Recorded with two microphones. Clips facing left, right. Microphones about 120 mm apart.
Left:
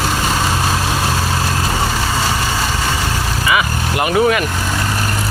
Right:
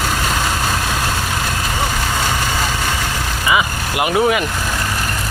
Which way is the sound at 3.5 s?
15° right (ahead or behind).